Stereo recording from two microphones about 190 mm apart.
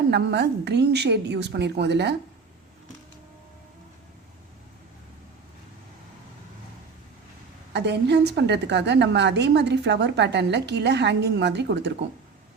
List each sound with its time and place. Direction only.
0.1 s a woman's voice: 65° right (ahead or behind)
7.7 s a woman's voice: 65° right (ahead or behind)